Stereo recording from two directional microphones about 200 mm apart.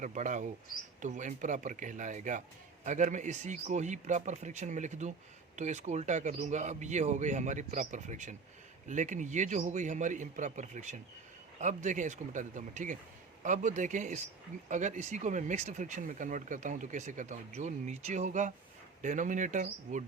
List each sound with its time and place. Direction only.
0.0 s speech: 40° right (ahead or behind)